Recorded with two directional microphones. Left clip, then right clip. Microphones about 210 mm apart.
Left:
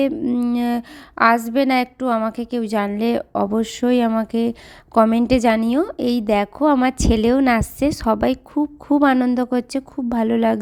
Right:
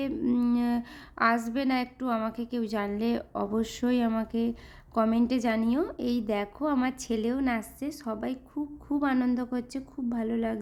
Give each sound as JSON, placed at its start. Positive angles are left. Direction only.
{"t": 0.0, "sound": "a woman's voice", "side_deg": 25}